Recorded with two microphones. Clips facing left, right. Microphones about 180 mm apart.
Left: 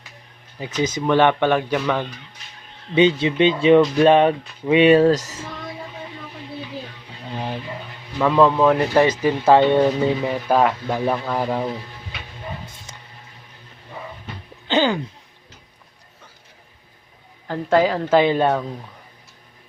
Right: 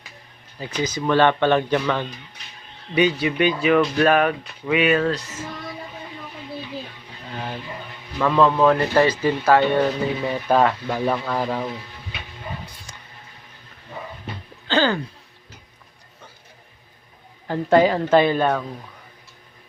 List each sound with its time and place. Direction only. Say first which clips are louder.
0.6 s speech: left 2 dB; 20° left (ahead or behind)
2.9 s speech: left 3 dB; 25° left (ahead or behind); by 5.4 s 40° left (ahead or behind)
8.2 s speech: left 1 dB; 10° left (ahead or behind)
12.6 s a sound: left 1 dB; 25° left (ahead or behind)
14.7 s a sound: left 1 dB; 15° left (ahead or behind)
17.7 s speech: right 1 dB; centre (ahead or behind)
18.2 s speech: left 1 dB; 20° left (ahead or behind)